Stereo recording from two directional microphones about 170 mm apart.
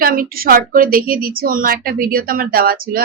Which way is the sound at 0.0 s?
60° right (ahead or behind).